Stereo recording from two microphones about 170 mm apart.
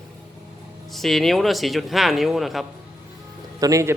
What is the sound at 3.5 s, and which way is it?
Speech, 20° right (ahead or behind).